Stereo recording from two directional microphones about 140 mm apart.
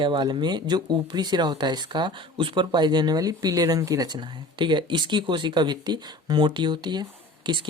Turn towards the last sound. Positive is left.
turn(degrees=-35)  # may be behind; listen again after turning